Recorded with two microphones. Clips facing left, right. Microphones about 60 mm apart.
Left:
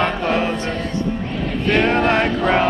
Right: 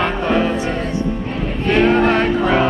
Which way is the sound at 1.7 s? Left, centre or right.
Centre.